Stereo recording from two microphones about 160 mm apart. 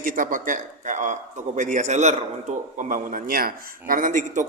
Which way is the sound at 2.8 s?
55° right (ahead or behind).